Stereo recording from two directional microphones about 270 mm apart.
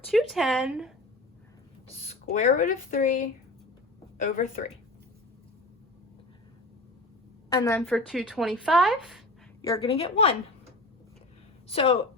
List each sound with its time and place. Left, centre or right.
0.1 s a woman's voice: centre
2.3 s speech: left
7.5 s a woman's voice: centre
9.6 s speech: centre
11.7 s speech: left